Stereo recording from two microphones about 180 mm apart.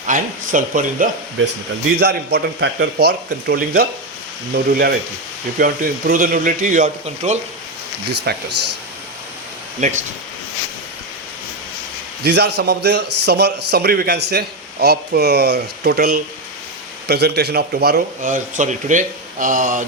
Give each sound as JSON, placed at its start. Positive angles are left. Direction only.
{"t": 0.1, "sound": "speech", "side_deg": -45}
{"t": 2.0, "sound": "a man's voice", "side_deg": -65}
{"t": 8.3, "sound": "a man's voice", "side_deg": -65}
{"t": 9.8, "sound": "speech", "side_deg": -45}
{"t": 12.2, "sound": "a man's voice", "side_deg": -65}